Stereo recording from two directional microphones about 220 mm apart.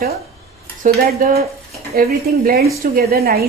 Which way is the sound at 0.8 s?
40° right (ahead or behind).